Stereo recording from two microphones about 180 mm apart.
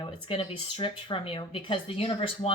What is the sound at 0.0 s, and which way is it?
Speech, 25° left (ahead or behind).